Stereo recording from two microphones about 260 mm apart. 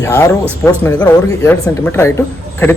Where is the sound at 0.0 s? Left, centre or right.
Centre.